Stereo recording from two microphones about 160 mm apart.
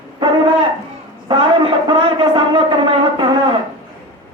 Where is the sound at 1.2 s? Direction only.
30° right (ahead or behind).